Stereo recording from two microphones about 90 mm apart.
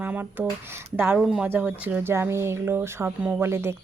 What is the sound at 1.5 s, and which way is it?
Speech, 15° right (ahead or behind).